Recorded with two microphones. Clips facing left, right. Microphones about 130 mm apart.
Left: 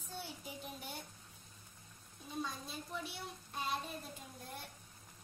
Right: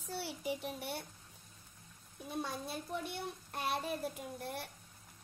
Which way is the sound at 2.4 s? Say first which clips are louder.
Right 4 dB; 65° right (ahead or behind).